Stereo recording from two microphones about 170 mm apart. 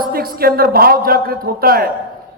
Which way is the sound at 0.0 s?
60° right (ahead or behind).